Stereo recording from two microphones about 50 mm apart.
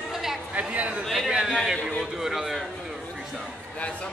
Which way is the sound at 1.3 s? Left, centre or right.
Centre.